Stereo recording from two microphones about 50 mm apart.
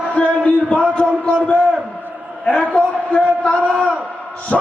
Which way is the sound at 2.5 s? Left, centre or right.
Centre.